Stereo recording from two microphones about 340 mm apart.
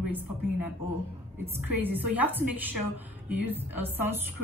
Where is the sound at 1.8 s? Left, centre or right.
Centre.